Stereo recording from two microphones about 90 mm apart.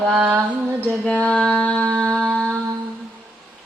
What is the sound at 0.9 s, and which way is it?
Mantra, 5° left (ahead or behind).